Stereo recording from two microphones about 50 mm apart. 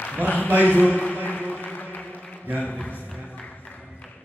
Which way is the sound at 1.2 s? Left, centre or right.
Left.